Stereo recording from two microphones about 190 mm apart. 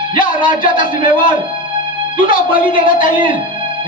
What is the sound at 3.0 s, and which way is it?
Speech, 45° left (ahead or behind).